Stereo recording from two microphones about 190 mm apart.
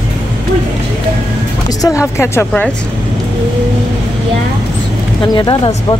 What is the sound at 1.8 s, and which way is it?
Speech, 15° left (ahead or behind).